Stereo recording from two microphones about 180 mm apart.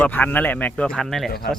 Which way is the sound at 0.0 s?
10° left (ahead or behind).